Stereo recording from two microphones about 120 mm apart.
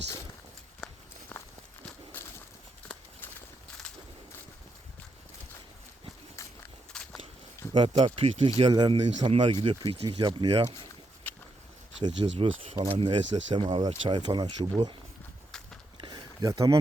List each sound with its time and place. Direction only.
2.1 s walk: 15° left (ahead or behind)
6.9 s walk: 5° left (ahead or behind)
7.7 s speech: 45° right (ahead or behind)
8.7 s speech: 35° right (ahead or behind)
11.3 s a sound: 15° left (ahead or behind)
12.2 s speech: 50° right (ahead or behind)
16.0 s a sound: 40° right (ahead or behind)
16.4 s speech: 30° right (ahead or behind)